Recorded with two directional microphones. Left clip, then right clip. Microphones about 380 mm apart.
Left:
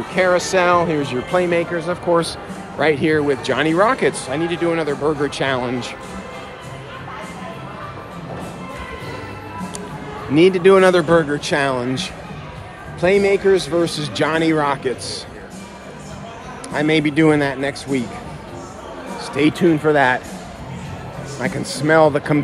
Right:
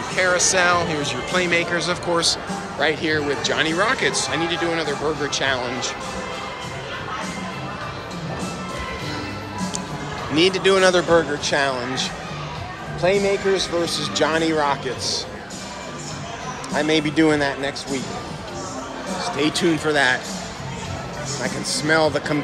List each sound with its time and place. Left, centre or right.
0.1 s speech: centre
10.3 s speech: centre
13.0 s a man's voice: centre
16.9 s speech: centre
19.3 s speech: centre
21.4 s speech: centre